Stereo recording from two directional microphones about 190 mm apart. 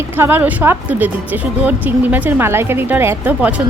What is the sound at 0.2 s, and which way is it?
A woman's voice, 10° right (ahead or behind).